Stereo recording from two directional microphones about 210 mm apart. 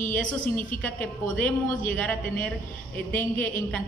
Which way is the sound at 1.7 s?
40° left (ahead or behind).